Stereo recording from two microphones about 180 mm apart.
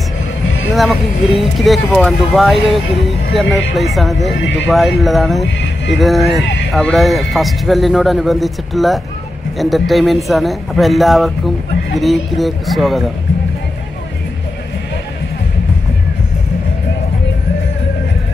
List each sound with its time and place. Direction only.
1.4 s speech: centre (ahead or behind)
4.4 s speech: 90° left
4.6 s speech: centre (ahead or behind)